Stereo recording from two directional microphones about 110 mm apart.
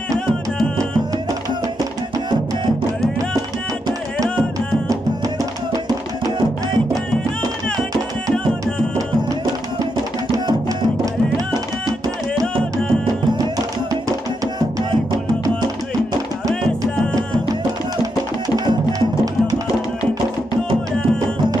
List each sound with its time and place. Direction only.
8.3 s music: 5° left (ahead or behind)
12.7 s music: 35° right (ahead or behind)
16.4 s music: 30° right (ahead or behind)
18.7 s music: 35° right (ahead or behind)